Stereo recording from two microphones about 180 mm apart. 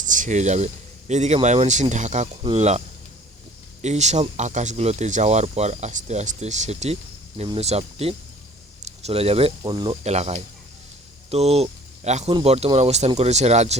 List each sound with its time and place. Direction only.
0.0 s speech: 45° right (ahead or behind)